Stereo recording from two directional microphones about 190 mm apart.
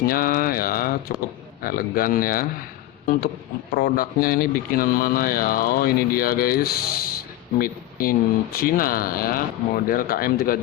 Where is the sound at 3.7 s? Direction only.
50° left (ahead or behind).